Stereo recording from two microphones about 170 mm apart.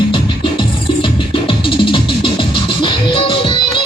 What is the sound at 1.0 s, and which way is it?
Music, 30° left (ahead or behind).